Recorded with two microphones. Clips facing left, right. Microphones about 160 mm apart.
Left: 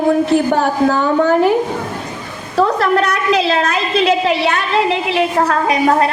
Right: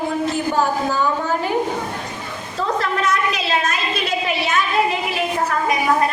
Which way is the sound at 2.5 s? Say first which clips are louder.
Left 8 dB; 70° left (ahead or behind).